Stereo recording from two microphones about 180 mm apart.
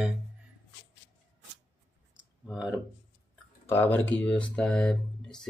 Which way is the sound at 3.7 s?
10° left (ahead or behind).